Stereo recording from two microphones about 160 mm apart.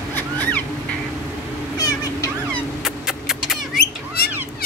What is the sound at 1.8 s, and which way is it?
Cat, 25° left (ahead or behind).